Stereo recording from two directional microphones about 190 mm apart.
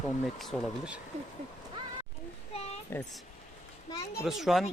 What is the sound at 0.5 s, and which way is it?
Speech, 5° left (ahead or behind).